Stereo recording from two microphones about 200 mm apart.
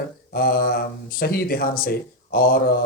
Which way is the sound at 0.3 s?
50° left (ahead or behind).